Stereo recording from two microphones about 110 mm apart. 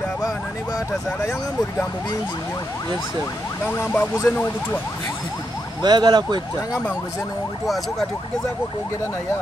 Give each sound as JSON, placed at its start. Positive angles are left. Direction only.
{"t": 3.6, "sound": "speech", "side_deg": 20}
{"t": 5.8, "sound": "speech", "side_deg": -40}